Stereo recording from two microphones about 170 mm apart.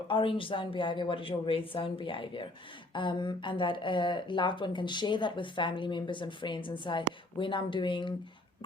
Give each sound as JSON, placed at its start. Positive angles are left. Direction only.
{"t": 0.1, "sound": "a woman's voice", "side_deg": 30}